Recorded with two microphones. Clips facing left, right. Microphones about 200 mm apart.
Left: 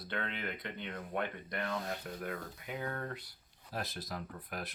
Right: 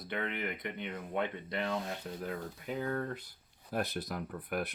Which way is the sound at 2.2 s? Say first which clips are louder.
Right 3 dB; 35° right (ahead or behind).